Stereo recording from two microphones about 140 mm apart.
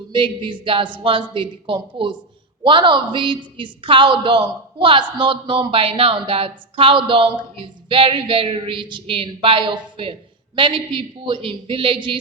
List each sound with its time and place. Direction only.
0.1 s a woman's voice: 35° right (ahead or behind)